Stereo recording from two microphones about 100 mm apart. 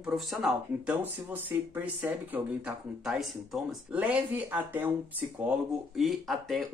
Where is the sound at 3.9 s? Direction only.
15° right (ahead or behind).